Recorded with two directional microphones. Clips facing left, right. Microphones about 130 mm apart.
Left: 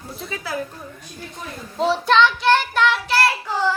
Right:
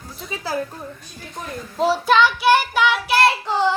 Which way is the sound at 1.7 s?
5° right (ahead or behind).